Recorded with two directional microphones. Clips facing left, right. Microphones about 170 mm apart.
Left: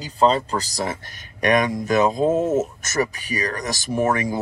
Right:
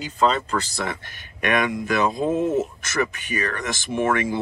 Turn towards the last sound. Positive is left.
turn(degrees=40)  # may be behind; listen again after turning